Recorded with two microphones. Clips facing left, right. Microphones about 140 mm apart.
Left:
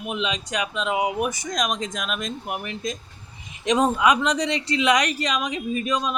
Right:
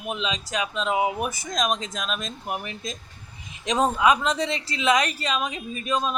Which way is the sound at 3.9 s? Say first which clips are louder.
Left 1 dB; 25° right (ahead or behind).